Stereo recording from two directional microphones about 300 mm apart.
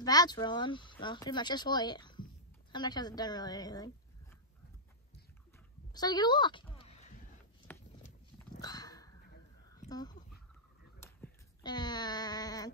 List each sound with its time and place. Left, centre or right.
0.0 s speech: centre
5.9 s a woman's voice: centre
8.5 s dog: centre
9.8 s speech: centre
11.1 s a sound: centre